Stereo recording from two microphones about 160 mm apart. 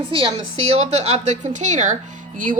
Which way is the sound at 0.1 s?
35° right (ahead or behind).